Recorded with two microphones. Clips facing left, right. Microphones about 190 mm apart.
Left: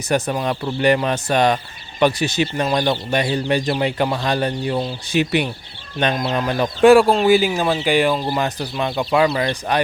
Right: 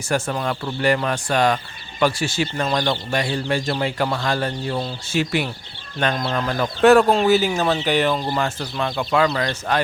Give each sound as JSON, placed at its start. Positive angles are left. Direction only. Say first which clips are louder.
{"t": 0.1, "sound": "speech", "louder": "left 3 dB", "side_deg": 20}